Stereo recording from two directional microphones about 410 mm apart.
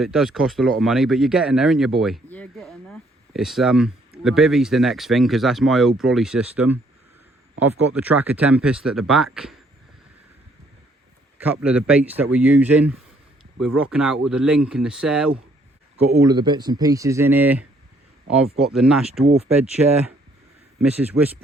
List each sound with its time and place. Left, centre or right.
0.0 s speech: centre
11.3 s speech: centre
18.7 s speech: centre
19.2 s speech: centre
20.8 s speech: centre